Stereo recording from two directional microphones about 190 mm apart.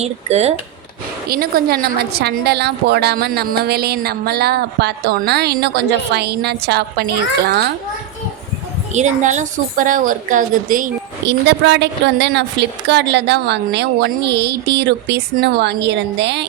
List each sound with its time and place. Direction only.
0.0 s speech: 35° right (ahead or behind)
1.3 s a woman's voice: 50° right (ahead or behind)
8.9 s a woman's voice: 40° right (ahead or behind)
11.3 s a woman's voice: 65° right (ahead or behind)